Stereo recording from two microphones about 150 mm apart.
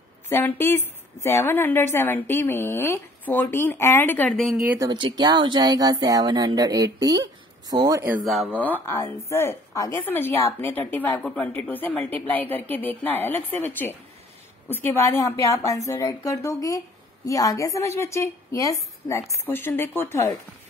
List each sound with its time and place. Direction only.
0.3 s a woman's voice: 15° left (ahead or behind)
4.7 s speech: 30° right (ahead or behind)
8.3 s a woman's voice: 5° left (ahead or behind)